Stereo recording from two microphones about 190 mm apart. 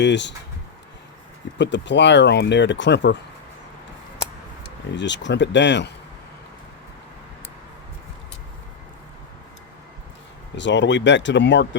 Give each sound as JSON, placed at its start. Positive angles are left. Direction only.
{"t": 0.0, "sound": "speech", "side_deg": 65}
{"t": 1.5, "sound": "speech", "side_deg": 65}
{"t": 4.9, "sound": "speech", "side_deg": 70}
{"t": 10.6, "sound": "speech", "side_deg": 70}